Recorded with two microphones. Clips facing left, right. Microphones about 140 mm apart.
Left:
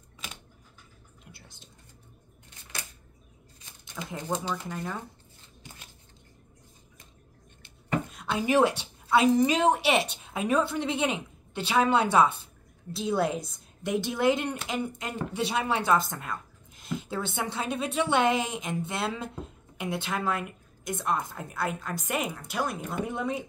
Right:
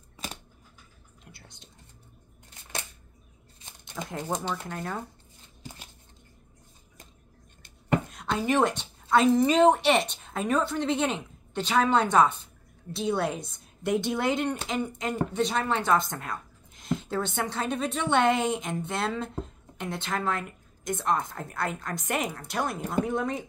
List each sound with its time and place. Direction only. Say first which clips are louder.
0.2 s scissors: right 5 dB; 40° right (ahead or behind)
1.2 s whispering: right 1 dB; centre (ahead or behind)
4.0 s speech: right 1 dB; 10° right (ahead or behind)
8.1 s a woman's voice: left 1 dB; 5° left (ahead or behind)